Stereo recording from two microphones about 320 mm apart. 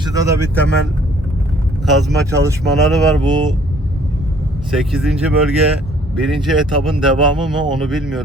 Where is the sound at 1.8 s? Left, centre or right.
Centre.